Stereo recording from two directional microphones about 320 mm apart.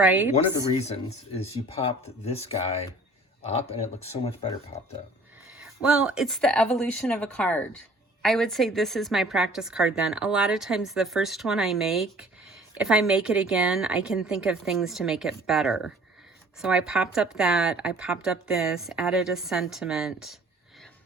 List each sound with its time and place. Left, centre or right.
0.0 s a woman's voice: centre
0.8 s speech: centre
5.5 s a woman's voice: centre